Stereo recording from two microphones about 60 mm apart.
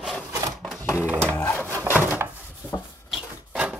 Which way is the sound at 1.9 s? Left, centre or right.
Right.